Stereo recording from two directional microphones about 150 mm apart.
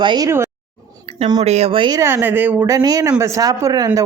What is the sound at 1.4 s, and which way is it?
Speech, 45° right (ahead or behind).